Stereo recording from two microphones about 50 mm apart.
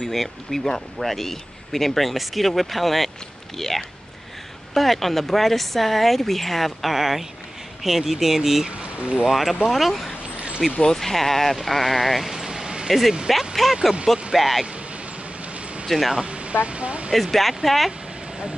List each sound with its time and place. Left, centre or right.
0.0 s speech: centre
8.6 s speech: right
9.3 s speech: centre
10.3 s a sound: right
10.8 s speech: centre
15.9 s speech: centre
16.2 s a sound: right
16.6 s speech: right
17.1 s speech: centre